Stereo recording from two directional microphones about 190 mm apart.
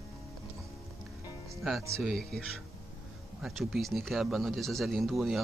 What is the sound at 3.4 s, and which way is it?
Speech, centre (ahead or behind).